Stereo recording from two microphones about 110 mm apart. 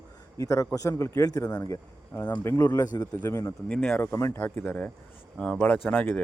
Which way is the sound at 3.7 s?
10° left (ahead or behind).